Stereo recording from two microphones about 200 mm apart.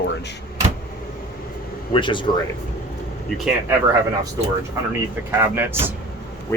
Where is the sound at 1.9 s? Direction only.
25° left (ahead or behind).